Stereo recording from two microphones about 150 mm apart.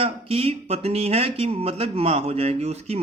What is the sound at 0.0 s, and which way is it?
A man's voice, 40° right (ahead or behind).